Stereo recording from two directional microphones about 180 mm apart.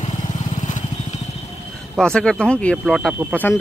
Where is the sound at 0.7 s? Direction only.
45° left (ahead or behind).